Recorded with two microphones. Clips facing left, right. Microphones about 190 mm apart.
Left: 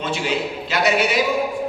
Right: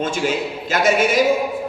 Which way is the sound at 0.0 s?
45° right (ahead or behind).